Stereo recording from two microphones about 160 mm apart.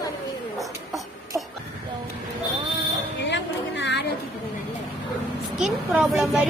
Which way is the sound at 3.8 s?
90° left.